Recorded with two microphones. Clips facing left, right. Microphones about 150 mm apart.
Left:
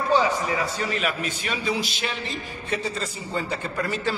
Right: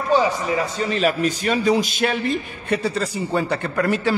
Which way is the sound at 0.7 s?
30° right (ahead or behind).